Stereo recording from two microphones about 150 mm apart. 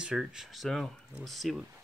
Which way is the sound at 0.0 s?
5° right (ahead or behind).